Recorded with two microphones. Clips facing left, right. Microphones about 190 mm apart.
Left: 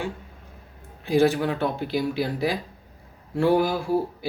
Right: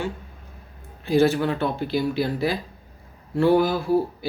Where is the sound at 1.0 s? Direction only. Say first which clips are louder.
Right 1 dB; 15° left (ahead or behind).